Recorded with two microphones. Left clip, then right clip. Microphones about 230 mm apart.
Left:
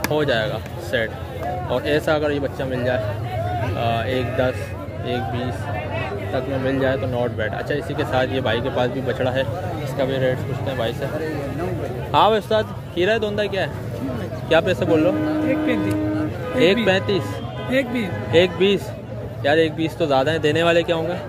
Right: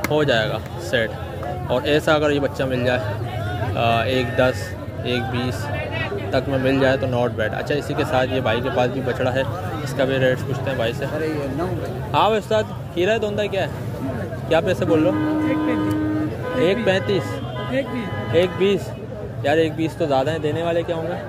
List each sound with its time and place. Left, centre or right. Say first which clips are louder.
0.1 s a man's voice: right 2 dB; centre
12.1 s speech: left 2 dB; centre
16.6 s speech: left 2 dB; centre
17.6 s speech: left 4 dB; left
18.3 s speech: left 2 dB; centre